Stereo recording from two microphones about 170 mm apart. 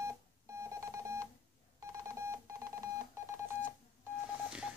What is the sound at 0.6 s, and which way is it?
Telephone dialing, 15° right (ahead or behind).